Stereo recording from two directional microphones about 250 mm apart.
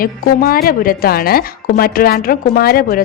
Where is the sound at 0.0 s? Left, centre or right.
Left.